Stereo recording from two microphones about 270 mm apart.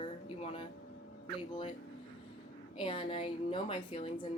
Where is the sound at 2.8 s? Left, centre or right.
Centre.